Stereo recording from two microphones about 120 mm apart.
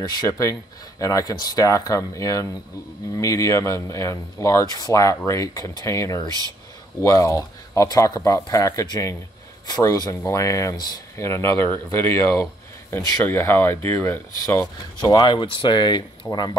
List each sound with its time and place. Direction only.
0.0 s speech: 35° left (ahead or behind); by 14.2 s 20° left (ahead or behind)
15.0 s speech: 35° left (ahead or behind)